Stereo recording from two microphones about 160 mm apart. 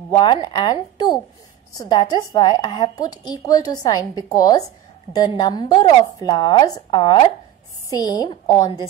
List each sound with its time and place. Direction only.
0.1 s speech: 30° left (ahead or behind)